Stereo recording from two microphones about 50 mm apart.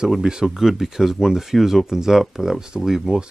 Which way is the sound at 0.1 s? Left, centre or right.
Centre.